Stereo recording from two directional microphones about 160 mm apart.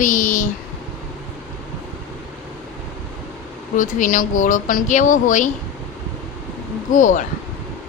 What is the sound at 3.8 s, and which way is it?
Speech, 55° left (ahead or behind).